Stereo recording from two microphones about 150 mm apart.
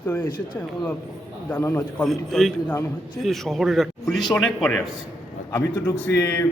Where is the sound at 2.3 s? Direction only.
Centre (ahead or behind).